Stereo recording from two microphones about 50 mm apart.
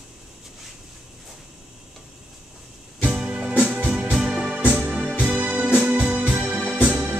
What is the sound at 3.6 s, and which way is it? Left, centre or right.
Music, right.